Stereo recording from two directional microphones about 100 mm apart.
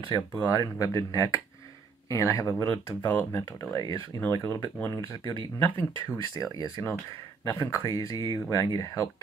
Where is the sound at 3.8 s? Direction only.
35° left (ahead or behind).